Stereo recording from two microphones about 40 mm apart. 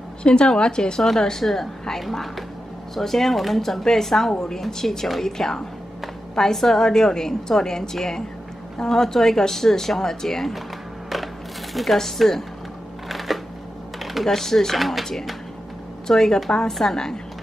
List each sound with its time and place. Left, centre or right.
0.2 s a woman's voice: left; by 10.6 s centre
11.7 s speech: centre
13.1 s shuffling cards: centre
13.9 s typing: centre
14.3 s a woman's voice: centre